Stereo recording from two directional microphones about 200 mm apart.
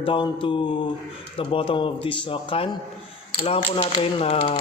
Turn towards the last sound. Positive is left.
turn(degrees=30)  # may be behind; listen again after turning